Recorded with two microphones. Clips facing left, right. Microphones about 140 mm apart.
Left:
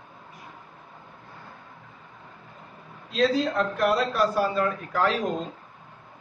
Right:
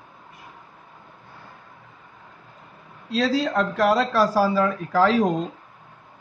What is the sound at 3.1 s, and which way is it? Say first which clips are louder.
A man's voice: right 1 dB; 90° right.